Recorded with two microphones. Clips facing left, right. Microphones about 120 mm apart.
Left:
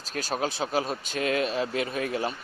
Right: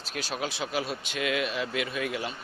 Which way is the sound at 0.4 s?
40° left (ahead or behind).